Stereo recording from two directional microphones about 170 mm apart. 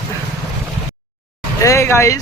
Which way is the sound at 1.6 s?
15° left (ahead or behind).